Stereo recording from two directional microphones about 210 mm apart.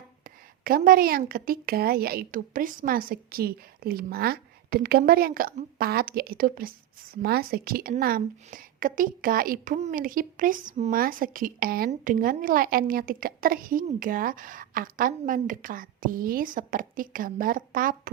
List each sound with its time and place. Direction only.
0.6 s a woman's voice: 45° right (ahead or behind)